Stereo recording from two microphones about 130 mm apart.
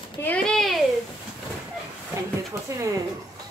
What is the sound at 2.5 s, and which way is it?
Speech, 25° right (ahead or behind).